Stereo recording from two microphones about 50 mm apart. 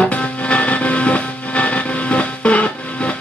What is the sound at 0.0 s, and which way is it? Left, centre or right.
Music, left.